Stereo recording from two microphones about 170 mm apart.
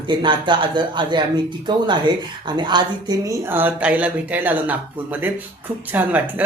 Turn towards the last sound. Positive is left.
turn(degrees=-10)  # may be behind; listen again after turning